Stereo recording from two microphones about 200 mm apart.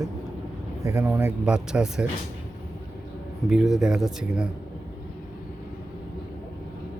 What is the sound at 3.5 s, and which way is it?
Speech, centre (ahead or behind).